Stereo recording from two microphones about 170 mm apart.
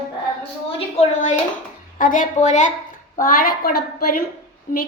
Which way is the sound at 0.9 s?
45° left (ahead or behind).